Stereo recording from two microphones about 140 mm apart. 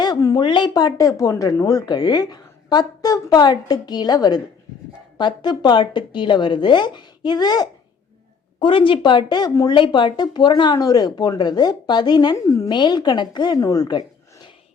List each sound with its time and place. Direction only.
0.0 s speech: 25° left (ahead or behind)